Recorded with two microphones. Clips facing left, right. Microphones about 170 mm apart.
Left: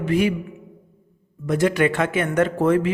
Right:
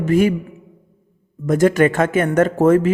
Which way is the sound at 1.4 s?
45° right (ahead or behind).